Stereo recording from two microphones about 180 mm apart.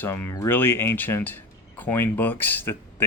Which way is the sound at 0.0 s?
15° left (ahead or behind).